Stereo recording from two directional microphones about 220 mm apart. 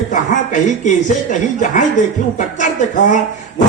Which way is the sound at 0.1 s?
35° left (ahead or behind).